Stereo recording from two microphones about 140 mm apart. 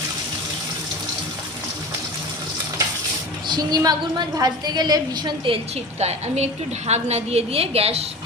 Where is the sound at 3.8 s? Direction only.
30° right (ahead or behind).